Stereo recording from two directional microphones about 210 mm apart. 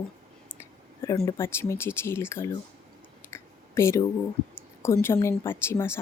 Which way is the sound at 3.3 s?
10° left (ahead or behind).